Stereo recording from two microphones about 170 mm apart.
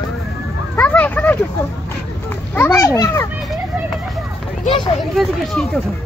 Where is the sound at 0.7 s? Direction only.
10° left (ahead or behind).